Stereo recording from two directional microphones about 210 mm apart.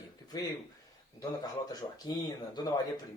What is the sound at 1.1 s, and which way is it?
Speech, 20° left (ahead or behind).